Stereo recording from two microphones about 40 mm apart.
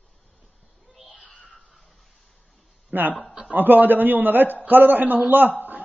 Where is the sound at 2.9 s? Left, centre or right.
Right.